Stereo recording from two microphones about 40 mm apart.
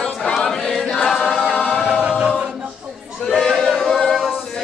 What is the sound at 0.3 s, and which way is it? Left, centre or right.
Choir, centre.